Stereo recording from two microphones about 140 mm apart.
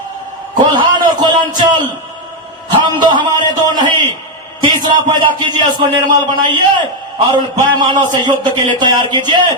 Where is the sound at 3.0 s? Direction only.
30° right (ahead or behind).